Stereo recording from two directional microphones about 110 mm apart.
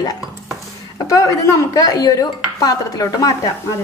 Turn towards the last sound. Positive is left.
turn(degrees=30)  # may be behind; listen again after turning